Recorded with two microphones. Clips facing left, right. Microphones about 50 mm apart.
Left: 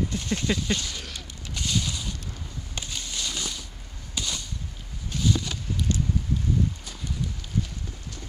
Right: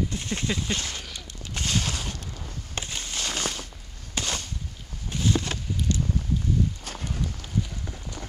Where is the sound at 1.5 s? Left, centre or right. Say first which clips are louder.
Right 1 dB; right.